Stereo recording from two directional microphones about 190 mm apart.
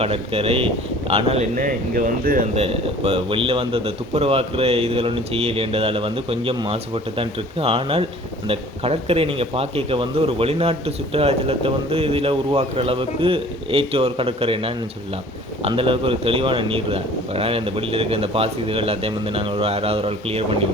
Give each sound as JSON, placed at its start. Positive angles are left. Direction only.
{"t": 0.0, "sound": "a man's voice", "side_deg": -30}
{"t": 2.6, "sound": "a man's voice", "side_deg": -30}